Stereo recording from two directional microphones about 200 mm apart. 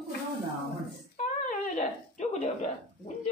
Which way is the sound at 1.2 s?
35° left (ahead or behind).